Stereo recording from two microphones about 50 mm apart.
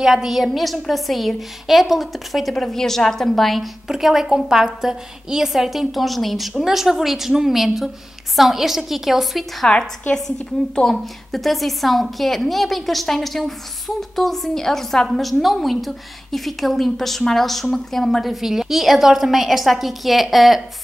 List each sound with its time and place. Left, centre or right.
0.0 s a woman's voice: centre
9.7 s a woman's voice: centre